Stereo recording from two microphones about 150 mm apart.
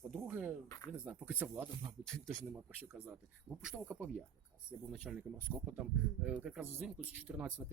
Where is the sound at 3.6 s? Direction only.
5° right (ahead or behind).